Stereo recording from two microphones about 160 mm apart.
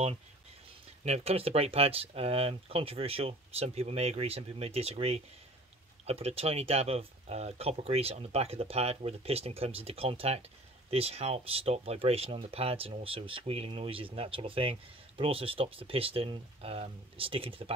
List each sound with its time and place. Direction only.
1.0 s speech: 40° right (ahead or behind)